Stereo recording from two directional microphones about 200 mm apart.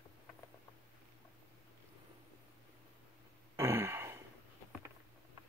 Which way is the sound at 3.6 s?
15° right (ahead or behind).